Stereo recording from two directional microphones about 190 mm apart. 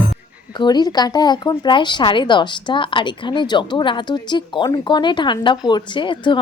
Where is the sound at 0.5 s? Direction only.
20° left (ahead or behind).